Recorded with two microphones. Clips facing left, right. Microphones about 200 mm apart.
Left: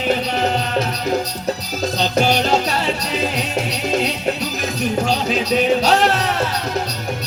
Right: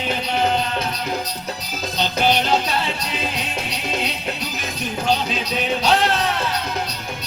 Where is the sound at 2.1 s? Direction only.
40° left (ahead or behind).